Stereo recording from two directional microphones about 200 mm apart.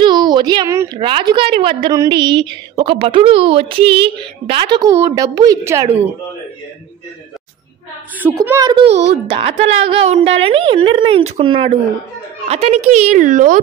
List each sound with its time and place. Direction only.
0.0 s a sound: 20° right (ahead or behind)
0.9 s a woman's voice: 25° right (ahead or behind)
8.2 s a woman's voice: 10° right (ahead or behind); by 13.6 s 40° right (ahead or behind)